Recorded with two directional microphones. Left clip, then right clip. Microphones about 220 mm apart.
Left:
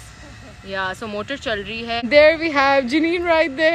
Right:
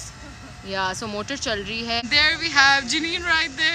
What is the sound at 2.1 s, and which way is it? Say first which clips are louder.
Speech: left 7 dB; 20° left (ahead or behind).